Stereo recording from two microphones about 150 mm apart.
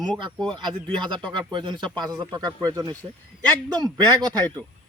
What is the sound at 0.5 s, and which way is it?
A man's voice, 30° right (ahead or behind).